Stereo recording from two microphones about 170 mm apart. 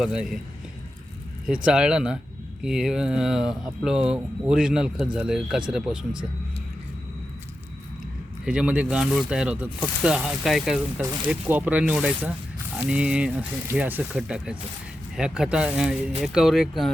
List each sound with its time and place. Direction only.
0.0 s speech: 5° right (ahead or behind)
1.5 s speech: 5° right (ahead or behind)
8.4 s speech: 5° right (ahead or behind)